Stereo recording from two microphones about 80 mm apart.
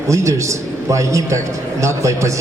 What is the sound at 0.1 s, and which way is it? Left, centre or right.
Speech, right.